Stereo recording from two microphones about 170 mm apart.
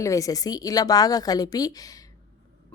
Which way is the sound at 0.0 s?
20° left (ahead or behind).